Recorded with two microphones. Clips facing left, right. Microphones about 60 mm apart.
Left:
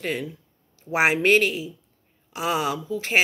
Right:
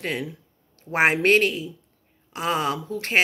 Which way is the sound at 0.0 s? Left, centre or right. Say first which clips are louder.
Even; right.